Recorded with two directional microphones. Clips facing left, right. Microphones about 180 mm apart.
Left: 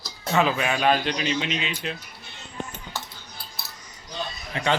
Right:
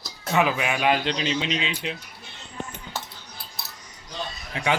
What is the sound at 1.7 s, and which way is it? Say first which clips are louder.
Speech: even; 15° right (ahead or behind).